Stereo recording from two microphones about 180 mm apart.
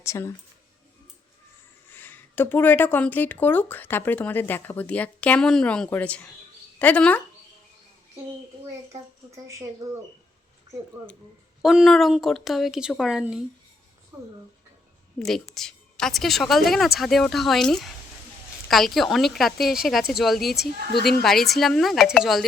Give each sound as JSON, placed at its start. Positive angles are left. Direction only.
{"t": 0.0, "sound": "speech", "side_deg": 15}
{"t": 1.9, "sound": "speech", "side_deg": 10}
{"t": 9.8, "sound": "speech", "side_deg": -20}
{"t": 11.6, "sound": "a woman's voice", "side_deg": 0}
{"t": 14.1, "sound": "speech", "side_deg": -15}
{"t": 15.2, "sound": "a woman's voice", "side_deg": 0}